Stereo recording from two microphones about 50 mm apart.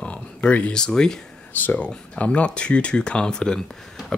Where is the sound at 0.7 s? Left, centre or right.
Centre.